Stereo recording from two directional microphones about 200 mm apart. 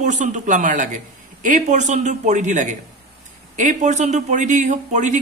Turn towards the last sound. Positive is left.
turn(degrees=-35)  # may be behind; listen again after turning